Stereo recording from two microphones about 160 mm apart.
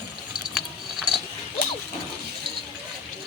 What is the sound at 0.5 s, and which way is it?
Ratchet, centre (ahead or behind).